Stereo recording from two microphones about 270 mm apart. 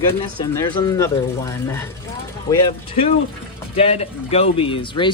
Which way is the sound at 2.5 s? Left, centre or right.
Left.